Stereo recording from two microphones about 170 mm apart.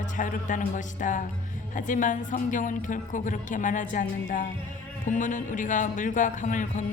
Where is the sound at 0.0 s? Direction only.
50° left (ahead or behind).